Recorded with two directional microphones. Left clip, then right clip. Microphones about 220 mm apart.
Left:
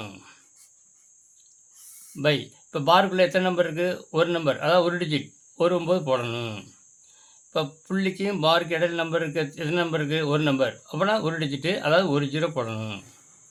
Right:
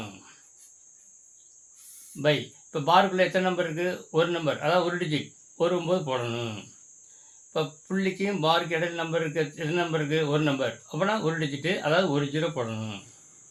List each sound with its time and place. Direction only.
2.2 s speech: 30° left (ahead or behind)